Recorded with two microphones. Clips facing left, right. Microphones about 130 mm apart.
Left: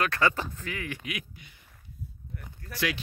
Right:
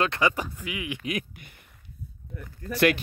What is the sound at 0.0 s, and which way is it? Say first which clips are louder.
Speech: right 2 dB; 20° right (ahead or behind).